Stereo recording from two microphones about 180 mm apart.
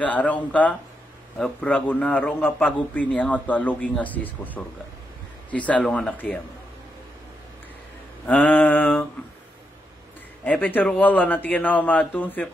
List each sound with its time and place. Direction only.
0.0 s a man's voice: 10° left (ahead or behind)
8.3 s mantra: 10° left (ahead or behind)
10.4 s a man's voice: 10° left (ahead or behind)